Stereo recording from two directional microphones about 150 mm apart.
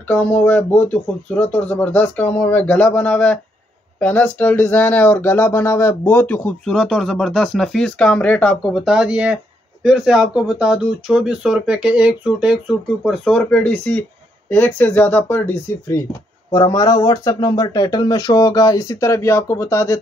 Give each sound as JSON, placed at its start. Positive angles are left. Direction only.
{"t": 0.1, "sound": "speech", "side_deg": 10}